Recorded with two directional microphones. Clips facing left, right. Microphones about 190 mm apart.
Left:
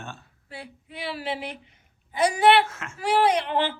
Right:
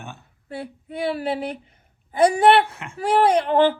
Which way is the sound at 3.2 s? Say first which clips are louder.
Right 6 dB; 50° right (ahead or behind).